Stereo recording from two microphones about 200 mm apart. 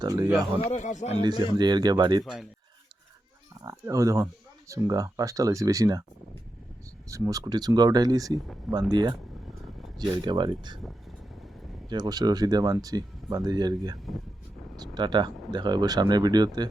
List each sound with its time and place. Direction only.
0.0 s speech: 20° right (ahead or behind)
0.3 s speech: 5° right (ahead or behind)
0.7 s speech: 35° left (ahead or behind)
1.2 s speech: 20° right (ahead or behind)
2.2 s speech: centre (ahead or behind)
3.6 s speech: 15° right (ahead or behind)
7.1 s speech: 15° right (ahead or behind)
10.2 s speech: 20° right (ahead or behind)
11.9 s speech: 20° right (ahead or behind)